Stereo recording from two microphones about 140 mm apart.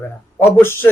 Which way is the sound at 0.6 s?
15° left (ahead or behind).